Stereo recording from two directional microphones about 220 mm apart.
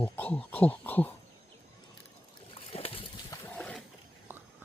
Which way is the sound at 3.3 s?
10° left (ahead or behind).